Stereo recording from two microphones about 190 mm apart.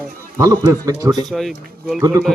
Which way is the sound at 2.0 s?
15° right (ahead or behind).